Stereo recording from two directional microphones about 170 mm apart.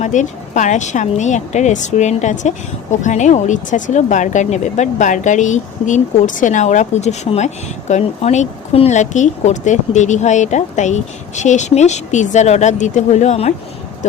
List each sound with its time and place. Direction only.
0.0 s speech: 45° left (ahead or behind)